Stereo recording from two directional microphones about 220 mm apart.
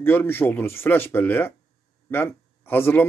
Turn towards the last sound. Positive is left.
turn(degrees=10)  # may be behind; listen again after turning